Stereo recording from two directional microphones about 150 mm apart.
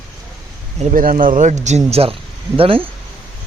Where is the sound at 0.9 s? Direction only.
65° right (ahead or behind); by 1.8 s 50° right (ahead or behind).